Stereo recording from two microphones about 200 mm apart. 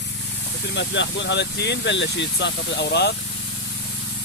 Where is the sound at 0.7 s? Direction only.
65° left (ahead or behind).